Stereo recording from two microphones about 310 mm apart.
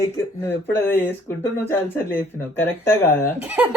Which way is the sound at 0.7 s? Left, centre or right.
Centre.